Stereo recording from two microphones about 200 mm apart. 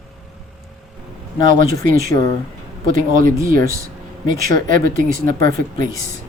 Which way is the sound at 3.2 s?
45° right (ahead or behind).